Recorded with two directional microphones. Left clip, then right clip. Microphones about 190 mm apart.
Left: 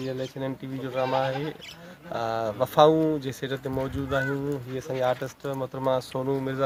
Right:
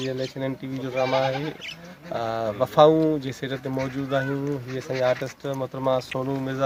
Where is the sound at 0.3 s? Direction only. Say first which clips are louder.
Right 3 dB; 5° left (ahead or behind).